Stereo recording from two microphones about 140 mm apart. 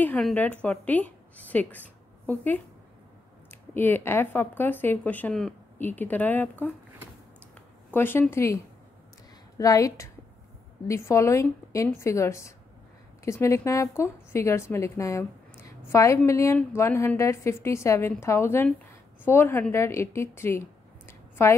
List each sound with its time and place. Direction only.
0.2 s a woman's voice: 10° left (ahead or behind)
3.7 s speech: 15° left (ahead or behind)
7.9 s speech: 15° left (ahead or behind)
9.6 s a woman's voice: 25° left (ahead or behind)
21.1 s a sound: 20° left (ahead or behind)